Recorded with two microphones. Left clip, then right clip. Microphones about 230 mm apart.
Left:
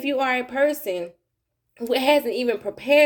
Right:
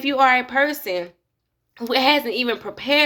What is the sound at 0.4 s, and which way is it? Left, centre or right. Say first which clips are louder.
Speech: right 1 dB; centre.